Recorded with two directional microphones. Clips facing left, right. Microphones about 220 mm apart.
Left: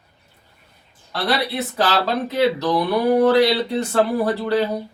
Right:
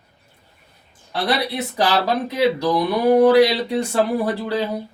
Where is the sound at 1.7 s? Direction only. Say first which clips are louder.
Right 2 dB; 15° right (ahead or behind).